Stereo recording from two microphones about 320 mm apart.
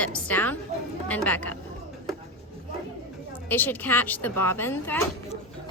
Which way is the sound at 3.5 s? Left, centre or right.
Centre.